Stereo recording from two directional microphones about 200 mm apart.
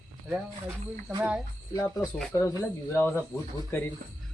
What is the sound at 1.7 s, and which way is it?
Speech, 15° left (ahead or behind).